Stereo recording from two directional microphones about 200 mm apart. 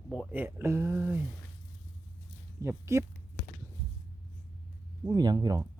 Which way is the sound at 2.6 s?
15° right (ahead or behind).